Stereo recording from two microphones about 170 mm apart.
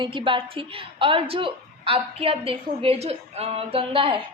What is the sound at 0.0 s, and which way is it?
A woman's voice, 30° right (ahead or behind).